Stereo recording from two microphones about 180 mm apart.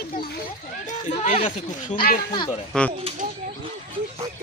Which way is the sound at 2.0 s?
55° left (ahead or behind).